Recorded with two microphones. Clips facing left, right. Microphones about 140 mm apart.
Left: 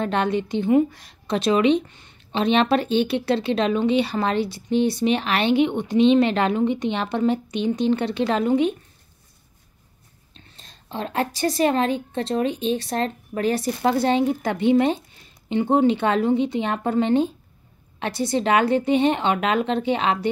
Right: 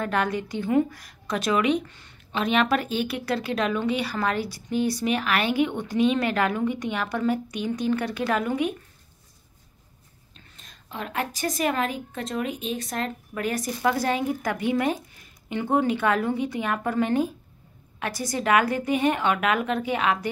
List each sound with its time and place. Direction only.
0.0 s a woman's voice: 25° left (ahead or behind)
10.3 s a woman's voice: 30° left (ahead or behind)